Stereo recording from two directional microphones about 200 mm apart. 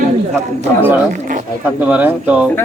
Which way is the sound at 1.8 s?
5° right (ahead or behind).